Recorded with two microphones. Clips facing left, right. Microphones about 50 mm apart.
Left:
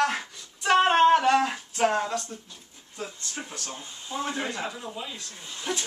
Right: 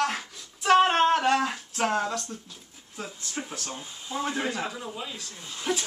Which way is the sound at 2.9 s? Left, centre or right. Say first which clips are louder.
Right 1 dB; centre.